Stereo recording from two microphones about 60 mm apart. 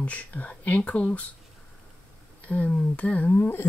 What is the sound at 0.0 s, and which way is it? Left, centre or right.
Speech, left.